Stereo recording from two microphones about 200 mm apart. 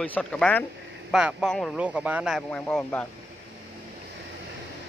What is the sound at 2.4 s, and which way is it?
Speech, 10° left (ahead or behind).